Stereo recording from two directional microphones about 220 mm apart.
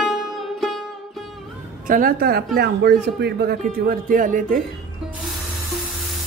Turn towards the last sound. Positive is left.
turn(degrees=-35)  # may be behind; listen again after turning